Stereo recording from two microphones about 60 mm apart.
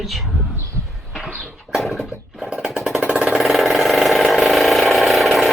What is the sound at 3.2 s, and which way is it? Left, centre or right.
Engine, centre.